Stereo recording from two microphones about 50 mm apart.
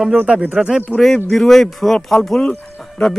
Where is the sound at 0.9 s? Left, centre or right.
Centre.